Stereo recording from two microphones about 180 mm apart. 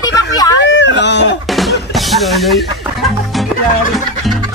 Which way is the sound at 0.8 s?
75° left (ahead or behind).